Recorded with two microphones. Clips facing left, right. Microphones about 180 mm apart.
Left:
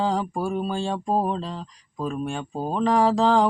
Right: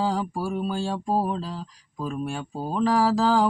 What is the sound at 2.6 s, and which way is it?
Speech, 25° left (ahead or behind).